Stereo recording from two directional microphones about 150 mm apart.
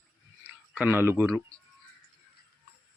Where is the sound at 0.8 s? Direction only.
15° right (ahead or behind).